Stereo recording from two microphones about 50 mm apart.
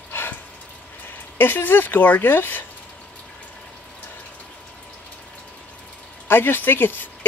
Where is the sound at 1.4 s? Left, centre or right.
Left.